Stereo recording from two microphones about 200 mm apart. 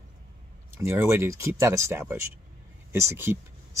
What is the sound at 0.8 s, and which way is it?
Speech, 15° right (ahead or behind).